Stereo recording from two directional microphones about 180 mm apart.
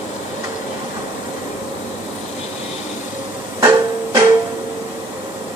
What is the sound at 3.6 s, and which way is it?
Music, 20° right (ahead or behind).